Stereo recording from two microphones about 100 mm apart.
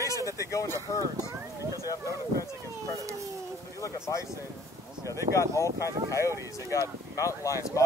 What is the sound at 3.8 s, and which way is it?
Speech, 30° left (ahead or behind).